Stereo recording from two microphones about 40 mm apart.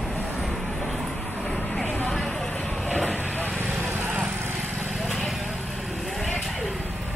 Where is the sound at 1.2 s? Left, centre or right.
Left.